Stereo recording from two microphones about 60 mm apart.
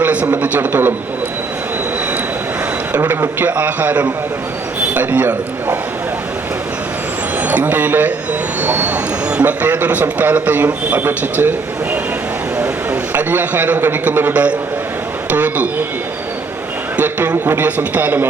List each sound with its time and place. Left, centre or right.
0.0 s a man's voice: right
3.4 s a man's voice: right
7.4 s a man's voice: right
12.5 s a sound: right
14.0 s a man's voice: right
17.0 s a man's voice: right